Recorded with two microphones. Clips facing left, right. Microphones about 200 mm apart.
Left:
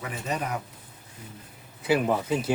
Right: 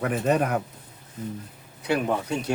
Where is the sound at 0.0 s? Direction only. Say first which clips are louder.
Right 9 dB; 55° right (ahead or behind).